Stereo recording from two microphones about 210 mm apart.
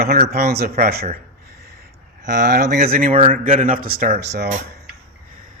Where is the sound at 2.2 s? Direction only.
40° right (ahead or behind).